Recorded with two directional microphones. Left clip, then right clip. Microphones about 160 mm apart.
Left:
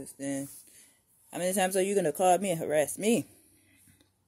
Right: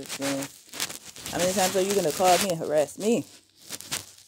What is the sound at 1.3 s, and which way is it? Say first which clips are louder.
Speech: right 4 dB; 5° left (ahead or behind).